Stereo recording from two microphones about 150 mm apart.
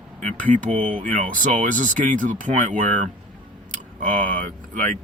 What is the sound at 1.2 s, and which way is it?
Speech, 60° right (ahead or behind).